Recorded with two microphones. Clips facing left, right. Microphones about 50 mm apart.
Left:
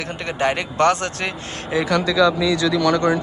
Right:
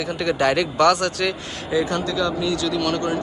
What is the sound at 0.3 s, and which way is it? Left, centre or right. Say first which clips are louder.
Speech: right 2 dB; left.